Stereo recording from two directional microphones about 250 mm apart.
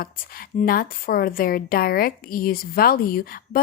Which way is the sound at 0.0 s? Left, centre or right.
Left.